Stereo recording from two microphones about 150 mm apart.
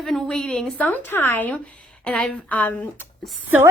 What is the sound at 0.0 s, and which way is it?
A woman's voice, 5° left (ahead or behind).